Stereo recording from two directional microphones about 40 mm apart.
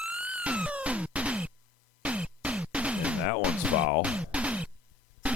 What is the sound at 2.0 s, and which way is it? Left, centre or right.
Music, right.